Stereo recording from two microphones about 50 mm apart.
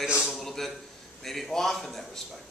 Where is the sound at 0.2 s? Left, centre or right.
Centre.